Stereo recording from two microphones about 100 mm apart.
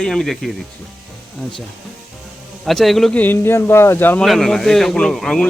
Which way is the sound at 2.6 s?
Centre (ahead or behind).